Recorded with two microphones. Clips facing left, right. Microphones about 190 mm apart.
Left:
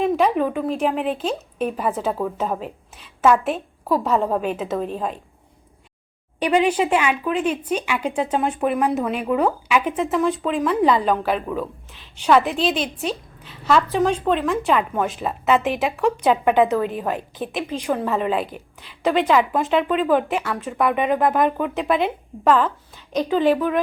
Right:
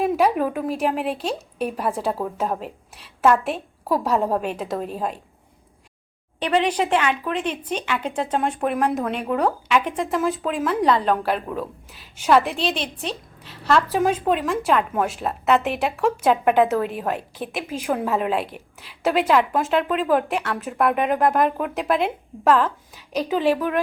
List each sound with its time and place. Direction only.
0.0 s a woman's voice: 5° right (ahead or behind)
6.4 s a woman's voice: 5° left (ahead or behind)